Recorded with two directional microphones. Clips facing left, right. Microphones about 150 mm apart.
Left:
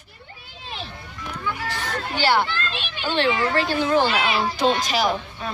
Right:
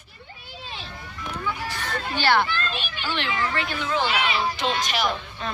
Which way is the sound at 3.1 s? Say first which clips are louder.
Left 7 dB; 35° left (ahead or behind).